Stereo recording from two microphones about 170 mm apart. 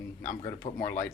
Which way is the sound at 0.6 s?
40° left (ahead or behind).